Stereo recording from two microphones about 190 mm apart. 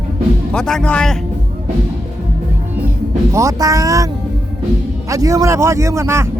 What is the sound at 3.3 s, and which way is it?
Speech, 15° right (ahead or behind).